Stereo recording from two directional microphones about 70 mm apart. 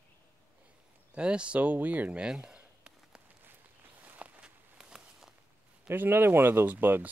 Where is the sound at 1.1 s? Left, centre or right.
Centre.